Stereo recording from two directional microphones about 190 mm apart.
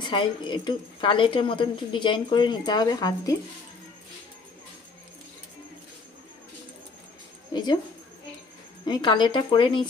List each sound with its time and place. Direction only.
0.0 s speech: 25° left (ahead or behind)
7.5 s speech: 20° left (ahead or behind)
8.8 s speech: 20° left (ahead or behind)